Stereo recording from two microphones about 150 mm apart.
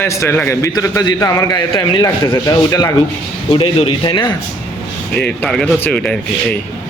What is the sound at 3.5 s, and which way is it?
Speech, 35° left (ahead or behind).